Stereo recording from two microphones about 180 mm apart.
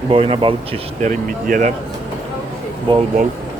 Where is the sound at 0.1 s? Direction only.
30° right (ahead or behind).